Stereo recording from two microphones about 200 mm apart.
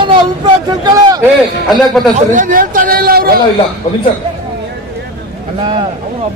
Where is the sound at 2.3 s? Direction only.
40° right (ahead or behind).